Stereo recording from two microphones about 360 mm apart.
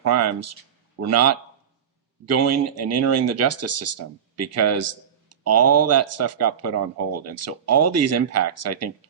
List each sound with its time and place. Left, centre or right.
0.1 s speech: right